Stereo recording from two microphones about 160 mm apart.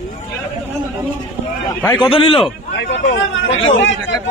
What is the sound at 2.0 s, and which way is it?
Speech, 35° left (ahead or behind).